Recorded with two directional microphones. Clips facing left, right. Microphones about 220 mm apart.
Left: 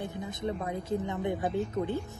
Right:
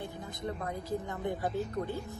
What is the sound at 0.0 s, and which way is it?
A woman's voice, 20° left (ahead or behind).